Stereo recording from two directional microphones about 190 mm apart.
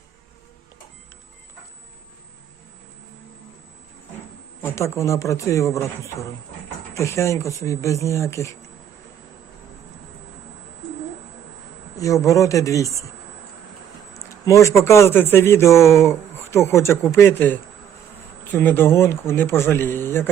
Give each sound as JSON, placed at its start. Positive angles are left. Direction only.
{"t": 4.6, "sound": "speech", "side_deg": 15}
{"t": 11.9, "sound": "speech", "side_deg": 15}
{"t": 14.1, "sound": "speech", "side_deg": 15}